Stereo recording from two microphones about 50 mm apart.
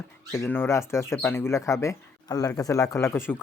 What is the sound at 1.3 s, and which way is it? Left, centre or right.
Speech, left.